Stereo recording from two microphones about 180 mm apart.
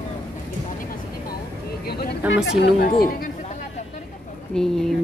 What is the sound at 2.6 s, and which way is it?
Speech, 55° left (ahead or behind).